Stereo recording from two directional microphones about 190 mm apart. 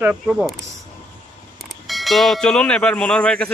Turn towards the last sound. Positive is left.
turn(degrees=5)  # may be behind; listen again after turning